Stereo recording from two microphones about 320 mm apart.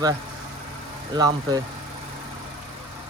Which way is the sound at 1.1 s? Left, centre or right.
Centre.